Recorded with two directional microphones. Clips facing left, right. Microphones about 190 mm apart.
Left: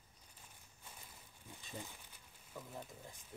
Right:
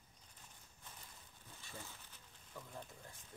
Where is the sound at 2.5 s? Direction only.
10° left (ahead or behind).